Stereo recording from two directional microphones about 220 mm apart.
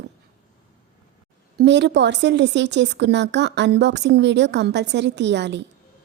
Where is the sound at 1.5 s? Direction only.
50° right (ahead or behind).